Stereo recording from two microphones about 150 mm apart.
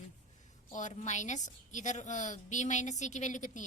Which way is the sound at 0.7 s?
55° left (ahead or behind).